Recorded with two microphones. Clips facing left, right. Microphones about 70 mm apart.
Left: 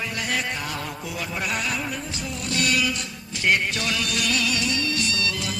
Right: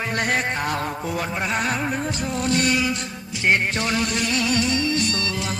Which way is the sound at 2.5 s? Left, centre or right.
Right.